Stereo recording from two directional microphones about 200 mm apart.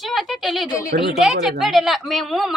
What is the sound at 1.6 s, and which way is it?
Speech, centre (ahead or behind).